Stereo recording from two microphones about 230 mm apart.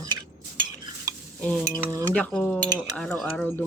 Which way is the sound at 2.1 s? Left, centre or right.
Centre.